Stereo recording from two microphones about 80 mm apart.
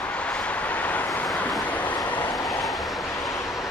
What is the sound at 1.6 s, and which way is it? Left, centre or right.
Train, centre.